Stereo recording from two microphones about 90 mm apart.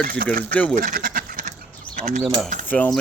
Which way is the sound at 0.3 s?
15° left (ahead or behind).